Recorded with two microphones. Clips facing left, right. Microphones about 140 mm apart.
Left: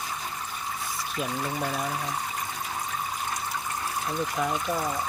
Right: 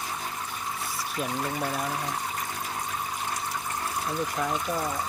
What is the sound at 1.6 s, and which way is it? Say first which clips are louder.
Speech: even; centre (ahead or behind).